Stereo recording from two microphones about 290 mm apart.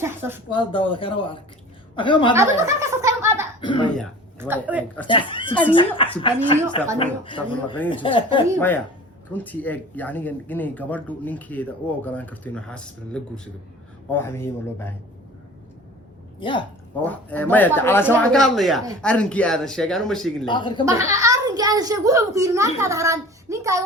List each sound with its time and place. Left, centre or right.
0.0 s speech: centre
0.5 s speech: centre
2.3 s chuckle: centre
3.6 s speech: centre
4.4 s speech: centre
5.0 s a woman's voice: centre
8.5 s speech: centre
16.4 s speech: centre
17.0 s speech: centre
20.4 s speech: centre
20.8 s a child's voice: centre